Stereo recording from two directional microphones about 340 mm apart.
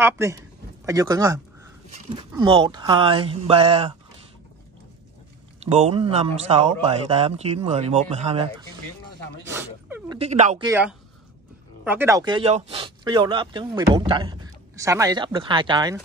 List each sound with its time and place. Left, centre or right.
0.0 s speech: centre
5.6 s speech: centre
9.5 s a sound: centre
10.1 s speech: centre
10.7 s speech: centre